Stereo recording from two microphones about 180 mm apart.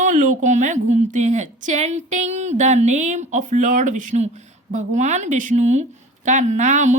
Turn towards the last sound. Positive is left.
turn(degrees=-40)  # may be behind; listen again after turning